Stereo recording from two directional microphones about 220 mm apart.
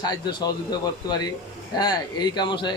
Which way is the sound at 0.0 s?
20° left (ahead or behind).